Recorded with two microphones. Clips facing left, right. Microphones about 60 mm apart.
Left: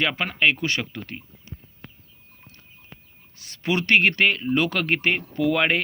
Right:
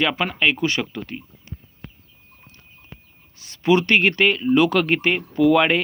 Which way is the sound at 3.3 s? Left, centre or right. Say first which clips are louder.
Right 7 dB; left.